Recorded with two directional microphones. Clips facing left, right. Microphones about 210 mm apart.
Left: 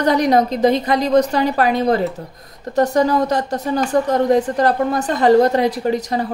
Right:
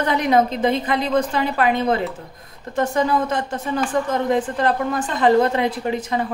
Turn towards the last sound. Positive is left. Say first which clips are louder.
# left 3 dB
turn(degrees=40)  # may be behind; listen again after turning